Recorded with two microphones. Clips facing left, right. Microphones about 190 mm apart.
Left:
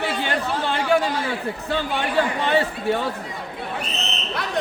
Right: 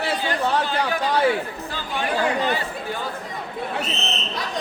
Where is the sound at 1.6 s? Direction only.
65° left (ahead or behind).